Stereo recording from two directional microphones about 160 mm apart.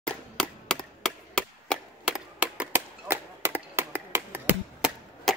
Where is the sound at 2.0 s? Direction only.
5° right (ahead or behind).